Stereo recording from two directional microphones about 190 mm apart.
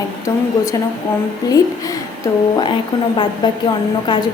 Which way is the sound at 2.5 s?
25° left (ahead or behind).